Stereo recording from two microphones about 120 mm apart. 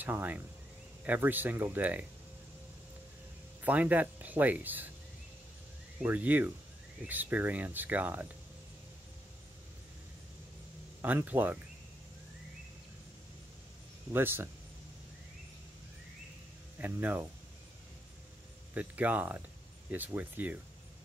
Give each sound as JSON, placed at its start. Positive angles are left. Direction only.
{"t": 0.0, "sound": "speech", "side_deg": -15}
{"t": 3.6, "sound": "speech", "side_deg": -15}
{"t": 6.0, "sound": "speech", "side_deg": -15}
{"t": 11.0, "sound": "speech", "side_deg": -15}
{"t": 14.1, "sound": "speech", "side_deg": -15}
{"t": 16.7, "sound": "speech", "side_deg": -15}
{"t": 18.7, "sound": "speech", "side_deg": -15}